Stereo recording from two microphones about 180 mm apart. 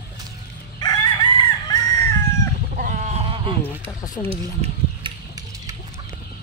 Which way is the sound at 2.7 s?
50° right (ahead or behind).